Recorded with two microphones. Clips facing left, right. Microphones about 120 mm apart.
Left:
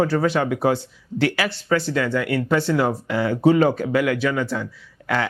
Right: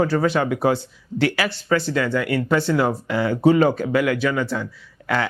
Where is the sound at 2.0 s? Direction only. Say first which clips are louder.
Even; 15° right (ahead or behind).